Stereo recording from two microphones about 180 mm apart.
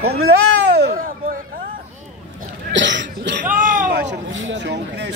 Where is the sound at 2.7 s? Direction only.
85° right.